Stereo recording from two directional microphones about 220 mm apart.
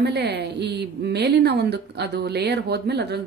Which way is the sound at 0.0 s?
45° right (ahead or behind).